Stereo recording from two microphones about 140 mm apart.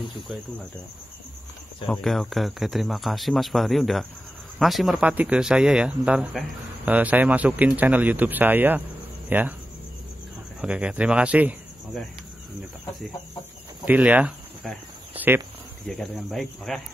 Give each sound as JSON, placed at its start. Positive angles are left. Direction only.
{"t": 1.9, "sound": "speech", "side_deg": 5}
{"t": 10.6, "sound": "speech", "side_deg": -10}
{"t": 13.8, "sound": "speech", "side_deg": -10}
{"t": 15.1, "sound": "a sound", "side_deg": -15}
{"t": 15.9, "sound": "speech", "side_deg": 0}